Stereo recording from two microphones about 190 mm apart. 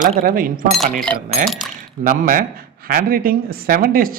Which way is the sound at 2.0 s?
45° right (ahead or behind).